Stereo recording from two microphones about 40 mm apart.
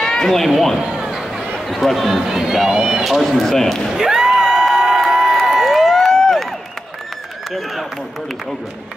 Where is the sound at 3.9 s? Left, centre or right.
Centre.